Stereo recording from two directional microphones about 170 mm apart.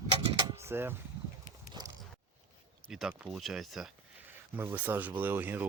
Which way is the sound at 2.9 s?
Centre (ahead or behind).